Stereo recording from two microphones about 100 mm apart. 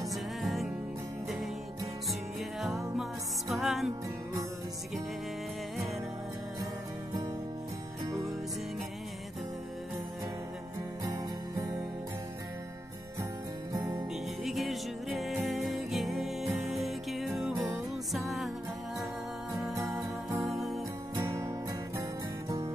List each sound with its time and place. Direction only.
0.1 s music: centre (ahead or behind)
2.6 s music: centre (ahead or behind)
11.1 s music: 35° right (ahead or behind)
13.7 s music: 35° right (ahead or behind)
14.4 s music: centre (ahead or behind)
20.4 s music: centre (ahead or behind)
21.1 s music: 30° right (ahead or behind)